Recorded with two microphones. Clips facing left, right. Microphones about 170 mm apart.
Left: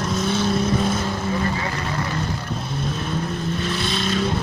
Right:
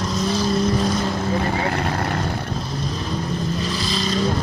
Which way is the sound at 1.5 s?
60° right (ahead or behind).